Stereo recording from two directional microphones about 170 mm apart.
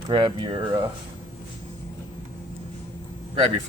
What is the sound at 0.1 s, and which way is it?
Speech, 30° right (ahead or behind).